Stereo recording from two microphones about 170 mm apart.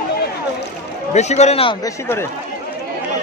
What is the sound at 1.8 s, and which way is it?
Speech, 15° left (ahead or behind).